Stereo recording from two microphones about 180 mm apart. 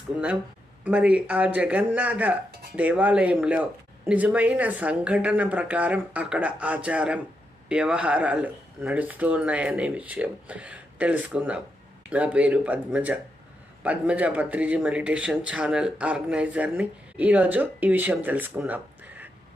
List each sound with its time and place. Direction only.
0.9 s speech: 5° right (ahead or behind)
2.5 s music: 60° right (ahead or behind)
2.7 s speech: 10° right (ahead or behind)